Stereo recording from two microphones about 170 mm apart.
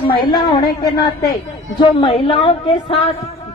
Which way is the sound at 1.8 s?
30° left (ahead or behind).